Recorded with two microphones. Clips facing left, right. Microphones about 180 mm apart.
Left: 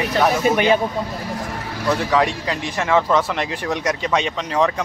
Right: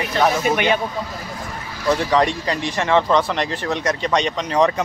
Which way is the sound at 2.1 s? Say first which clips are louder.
Right 1 dB; 5° left (ahead or behind).